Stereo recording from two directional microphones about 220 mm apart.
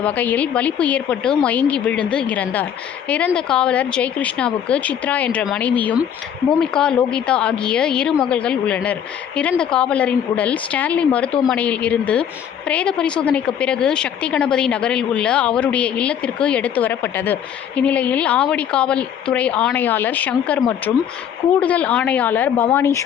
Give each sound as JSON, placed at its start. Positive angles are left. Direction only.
{"t": 0.0, "sound": "a woman's voice", "side_deg": 5}